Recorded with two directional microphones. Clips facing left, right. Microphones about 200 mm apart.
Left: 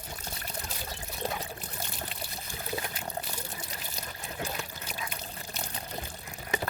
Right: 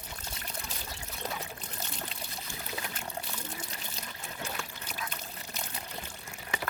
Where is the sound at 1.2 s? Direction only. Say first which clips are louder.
Left 4 dB; 30° left (ahead or behind).